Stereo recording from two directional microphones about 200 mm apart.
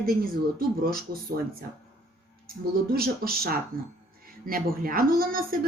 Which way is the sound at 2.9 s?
50° right (ahead or behind).